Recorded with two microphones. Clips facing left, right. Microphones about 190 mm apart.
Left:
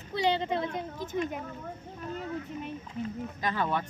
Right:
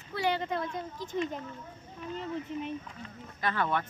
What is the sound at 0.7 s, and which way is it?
Speech, 55° left (ahead or behind).